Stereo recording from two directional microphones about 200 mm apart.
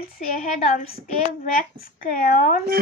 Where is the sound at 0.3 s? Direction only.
45° left (ahead or behind).